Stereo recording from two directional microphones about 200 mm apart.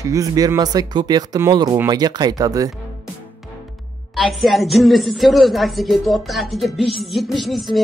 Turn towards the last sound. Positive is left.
turn(degrees=0)  # may be behind; listen again after turning